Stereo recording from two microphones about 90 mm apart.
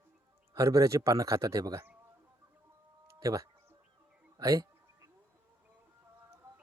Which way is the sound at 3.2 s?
40° right (ahead or behind).